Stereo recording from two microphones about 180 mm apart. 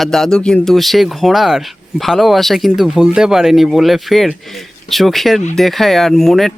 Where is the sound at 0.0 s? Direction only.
Centre (ahead or behind).